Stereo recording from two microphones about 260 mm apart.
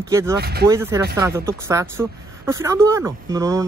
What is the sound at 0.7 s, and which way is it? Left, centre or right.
Speech, centre.